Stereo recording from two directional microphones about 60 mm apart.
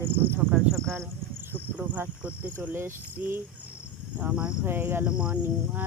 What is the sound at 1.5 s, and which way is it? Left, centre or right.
Speech, right.